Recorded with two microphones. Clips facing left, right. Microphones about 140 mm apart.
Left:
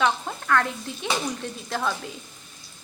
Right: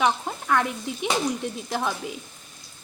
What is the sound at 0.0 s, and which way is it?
A woman's voice, 15° right (ahead or behind).